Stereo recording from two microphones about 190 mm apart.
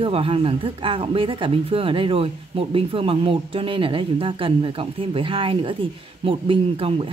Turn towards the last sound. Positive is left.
turn(degrees=-30)  # may be behind; listen again after turning